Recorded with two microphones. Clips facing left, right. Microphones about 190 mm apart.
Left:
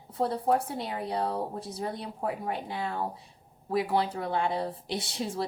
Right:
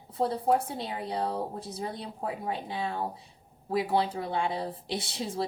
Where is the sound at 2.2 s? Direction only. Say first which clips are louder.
Left 1 dB; 25° right (ahead or behind).